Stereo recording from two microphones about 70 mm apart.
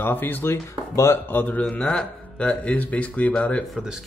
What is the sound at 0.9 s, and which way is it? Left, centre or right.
Speech, left.